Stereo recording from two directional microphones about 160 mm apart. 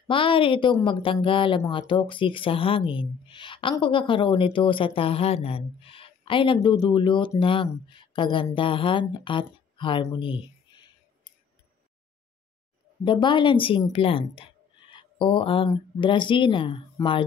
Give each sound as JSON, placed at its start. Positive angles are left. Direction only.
{"t": 0.1, "sound": "speech", "side_deg": 35}
{"t": 13.0, "sound": "a woman's voice", "side_deg": 30}